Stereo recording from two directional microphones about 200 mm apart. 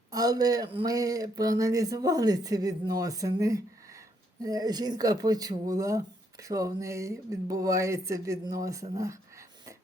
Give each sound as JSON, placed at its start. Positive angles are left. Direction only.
{"t": 0.1, "sound": "speech", "side_deg": -20}